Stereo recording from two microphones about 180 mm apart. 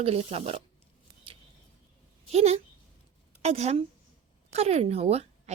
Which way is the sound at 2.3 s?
35° right (ahead or behind).